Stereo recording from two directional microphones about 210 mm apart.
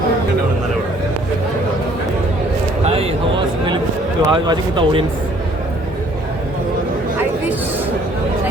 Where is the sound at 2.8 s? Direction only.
25° right (ahead or behind).